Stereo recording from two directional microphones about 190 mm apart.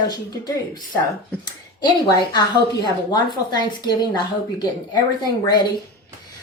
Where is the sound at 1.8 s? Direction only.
20° left (ahead or behind).